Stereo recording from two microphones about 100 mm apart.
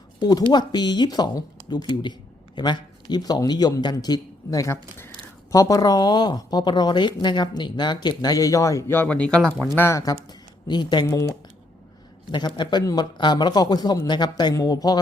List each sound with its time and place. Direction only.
0.2 s a man's voice: 40° left (ahead or behind)
9.0 s speech: 10° left (ahead or behind)
9.7 s speech: 25° left (ahead or behind)
10.0 s speech: 40° left (ahead or behind)
11.0 s speech: 35° left (ahead or behind)
12.3 s speech: 45° left (ahead or behind)